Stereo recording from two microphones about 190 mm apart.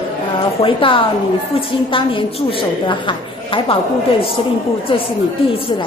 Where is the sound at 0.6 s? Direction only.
30° left (ahead or behind).